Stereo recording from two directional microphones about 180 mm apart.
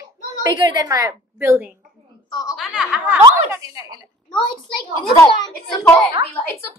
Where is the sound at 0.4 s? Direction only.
20° right (ahead or behind).